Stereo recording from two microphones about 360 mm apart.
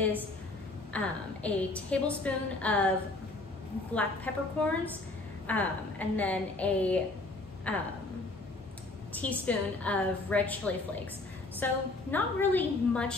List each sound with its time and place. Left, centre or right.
0.9 s a woman's voice: centre
3.9 s a woman's voice: centre
9.1 s a woman's voice: centre
11.6 s a woman's voice: centre